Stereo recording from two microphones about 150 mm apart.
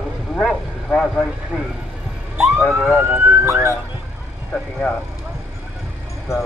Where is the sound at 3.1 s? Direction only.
15° right (ahead or behind).